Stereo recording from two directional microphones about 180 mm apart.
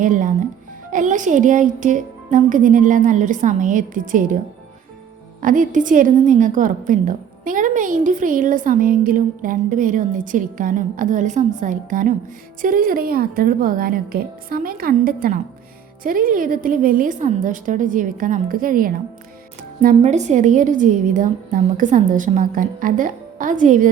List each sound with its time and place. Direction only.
0.0 s a woman's voice: 45° right (ahead or behind)
5.4 s a woman's voice: 50° right (ahead or behind)